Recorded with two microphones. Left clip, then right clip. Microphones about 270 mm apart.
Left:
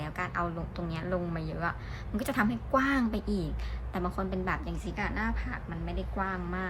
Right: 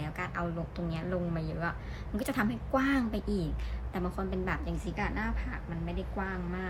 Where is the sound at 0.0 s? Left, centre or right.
Centre.